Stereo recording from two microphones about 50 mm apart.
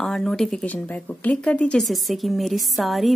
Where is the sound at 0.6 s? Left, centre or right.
Left.